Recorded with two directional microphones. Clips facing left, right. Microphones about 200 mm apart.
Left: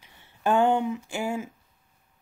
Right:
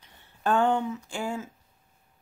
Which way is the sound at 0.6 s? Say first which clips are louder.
Left 3 dB; 20° left (ahead or behind).